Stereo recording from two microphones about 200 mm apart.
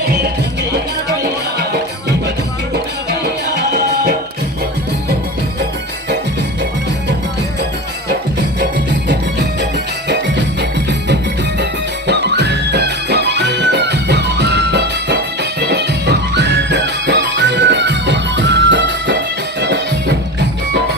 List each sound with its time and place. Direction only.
1.2 s music: 55° right (ahead or behind)
8.9 s music: 60° right (ahead or behind)